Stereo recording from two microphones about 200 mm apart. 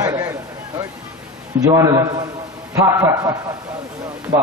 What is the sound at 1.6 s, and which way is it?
A man's voice, 15° right (ahead or behind).